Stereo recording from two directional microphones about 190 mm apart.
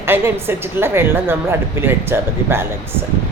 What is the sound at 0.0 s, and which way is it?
A woman's voice, 10° right (ahead or behind).